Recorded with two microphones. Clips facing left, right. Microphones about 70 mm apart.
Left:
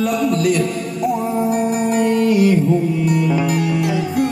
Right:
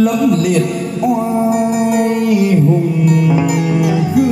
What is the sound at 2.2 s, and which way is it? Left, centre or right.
Music, centre.